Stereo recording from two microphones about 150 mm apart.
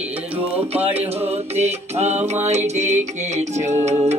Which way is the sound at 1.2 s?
45° right (ahead or behind).